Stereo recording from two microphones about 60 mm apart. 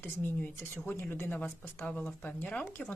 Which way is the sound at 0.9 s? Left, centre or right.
Left.